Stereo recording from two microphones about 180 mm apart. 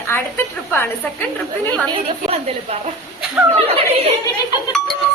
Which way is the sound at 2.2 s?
35° right (ahead or behind).